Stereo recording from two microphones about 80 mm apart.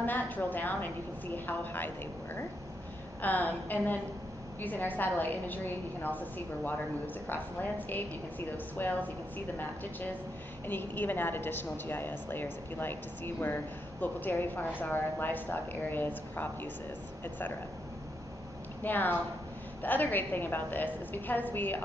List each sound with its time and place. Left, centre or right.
0.0 s a woman's voice: left
3.2 s a woman's voice: left
10.7 s a woman's voice: left
18.8 s a woman's voice: left